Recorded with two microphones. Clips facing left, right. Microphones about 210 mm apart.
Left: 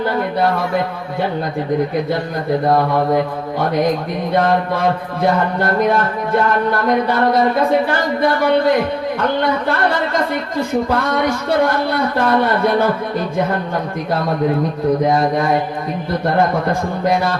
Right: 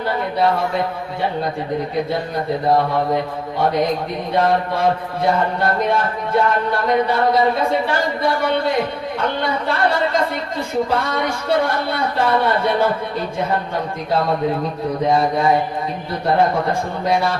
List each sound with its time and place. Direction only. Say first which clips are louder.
11.9 s speech: left 3 dB; 50° left (ahead or behind)